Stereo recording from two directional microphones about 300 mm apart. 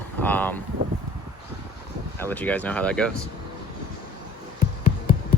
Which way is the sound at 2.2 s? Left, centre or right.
Centre.